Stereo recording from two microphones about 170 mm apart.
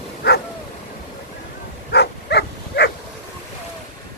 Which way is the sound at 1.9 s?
75° left (ahead or behind).